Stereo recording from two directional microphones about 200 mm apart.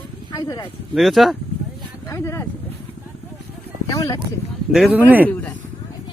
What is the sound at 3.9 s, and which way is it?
Speech, 15° left (ahead or behind).